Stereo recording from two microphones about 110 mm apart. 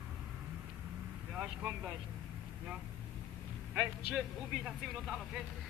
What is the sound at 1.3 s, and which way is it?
Speech, 10° right (ahead or behind).